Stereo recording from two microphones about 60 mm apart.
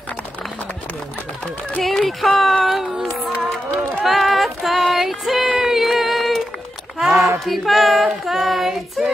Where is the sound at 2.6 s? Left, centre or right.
Centre.